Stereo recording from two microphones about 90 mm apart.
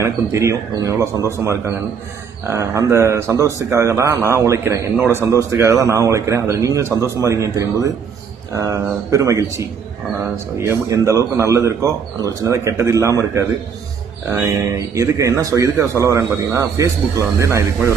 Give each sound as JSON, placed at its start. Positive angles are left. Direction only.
{"t": 0.0, "sound": "speech", "side_deg": -35}